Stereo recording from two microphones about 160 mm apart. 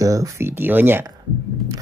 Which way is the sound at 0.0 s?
20° right (ahead or behind).